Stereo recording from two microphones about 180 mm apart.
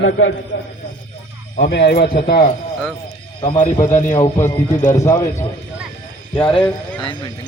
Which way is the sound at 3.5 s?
45° left (ahead or behind).